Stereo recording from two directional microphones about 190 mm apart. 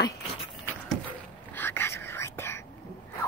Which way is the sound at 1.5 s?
10° left (ahead or behind).